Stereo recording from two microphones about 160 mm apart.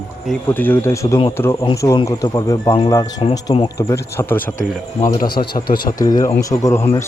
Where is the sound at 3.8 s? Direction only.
15° left (ahead or behind).